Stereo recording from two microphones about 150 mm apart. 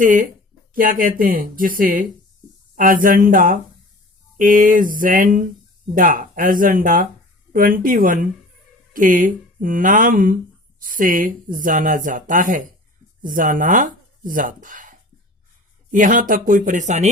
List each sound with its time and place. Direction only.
0.0 s speech: 60° right (ahead or behind)